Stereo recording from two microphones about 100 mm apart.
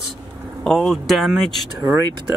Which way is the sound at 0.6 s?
5° left (ahead or behind).